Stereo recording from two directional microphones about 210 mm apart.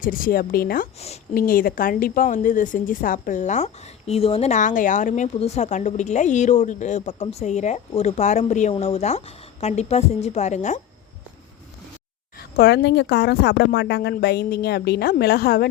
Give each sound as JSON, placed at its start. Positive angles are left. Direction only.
{"t": 0.0, "sound": "speech", "side_deg": 40}
{"t": 0.9, "sound": "a woman's voice", "side_deg": 30}
{"t": 1.3, "sound": "a woman's voice", "side_deg": 45}
{"t": 12.4, "sound": "speech", "side_deg": 50}